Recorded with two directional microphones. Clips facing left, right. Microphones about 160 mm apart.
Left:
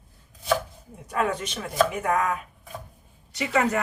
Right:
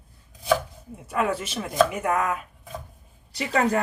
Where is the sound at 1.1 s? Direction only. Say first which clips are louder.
Right 1 dB; 5° right (ahead or behind).